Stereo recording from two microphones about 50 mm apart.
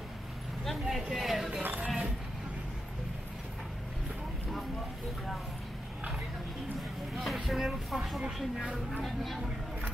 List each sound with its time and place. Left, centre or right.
0.7 s vehicle: centre
1.1 s a sound: centre
1.6 s music: right
7.2 s speech: centre